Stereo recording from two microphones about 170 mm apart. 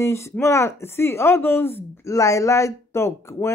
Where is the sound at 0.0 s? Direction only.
15° left (ahead or behind).